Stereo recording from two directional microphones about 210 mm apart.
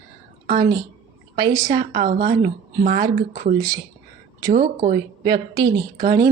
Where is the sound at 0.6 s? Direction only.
20° right (ahead or behind).